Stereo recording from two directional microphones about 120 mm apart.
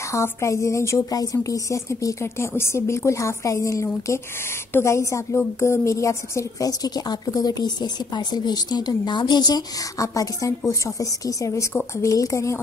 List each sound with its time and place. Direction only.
0.1 s a woman's voice: 25° left (ahead or behind)